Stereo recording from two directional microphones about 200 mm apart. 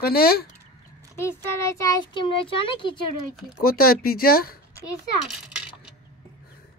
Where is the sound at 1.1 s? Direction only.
15° left (ahead or behind).